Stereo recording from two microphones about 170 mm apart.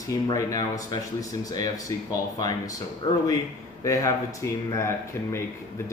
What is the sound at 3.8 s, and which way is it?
Speech, 20° left (ahead or behind).